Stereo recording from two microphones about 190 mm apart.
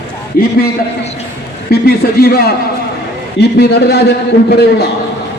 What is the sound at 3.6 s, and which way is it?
A man's voice, 60° left (ahead or behind).